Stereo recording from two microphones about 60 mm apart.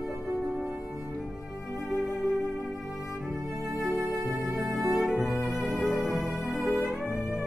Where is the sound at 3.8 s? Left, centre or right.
Centre.